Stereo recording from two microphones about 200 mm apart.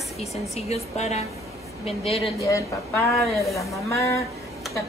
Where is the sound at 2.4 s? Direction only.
15° left (ahead or behind).